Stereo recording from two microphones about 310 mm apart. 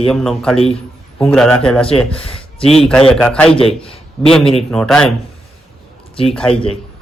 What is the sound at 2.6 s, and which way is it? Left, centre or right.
Speech, centre.